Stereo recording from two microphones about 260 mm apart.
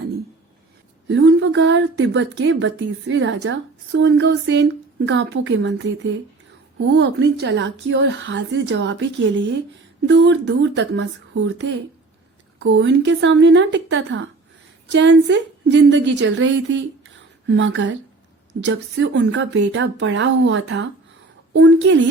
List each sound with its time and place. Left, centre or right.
1.0 s speech: right
6.8 s a woman's voice: right